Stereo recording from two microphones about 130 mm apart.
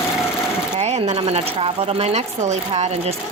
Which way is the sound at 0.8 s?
60° right (ahead or behind).